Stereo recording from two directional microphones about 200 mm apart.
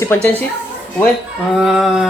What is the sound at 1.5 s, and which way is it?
Speech, centre (ahead or behind).